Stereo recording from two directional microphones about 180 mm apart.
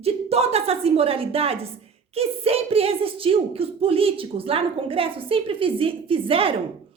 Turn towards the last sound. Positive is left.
turn(degrees=-30)  # may be behind; listen again after turning